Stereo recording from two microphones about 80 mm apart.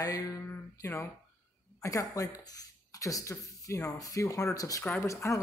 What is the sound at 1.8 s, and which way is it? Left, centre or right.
A man's voice, left.